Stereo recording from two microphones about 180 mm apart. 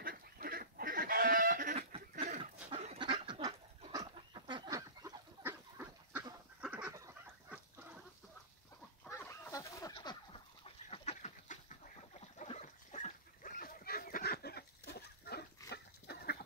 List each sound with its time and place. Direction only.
0.0 s goat: 55° right (ahead or behind)
1.8 s chuckle: 30° right (ahead or behind)
2.7 s duck: 35° right (ahead or behind); by 6.2 s 10° right (ahead or behind)
6.6 s goose: 5° right (ahead or behind)
9.1 s chicken: 15° left (ahead or behind); by 11.5 s 40° left (ahead or behind)
12.4 s dog: 40° left (ahead or behind); by 15.4 s 65° left (ahead or behind)
15.7 s livestock: 60° left (ahead or behind)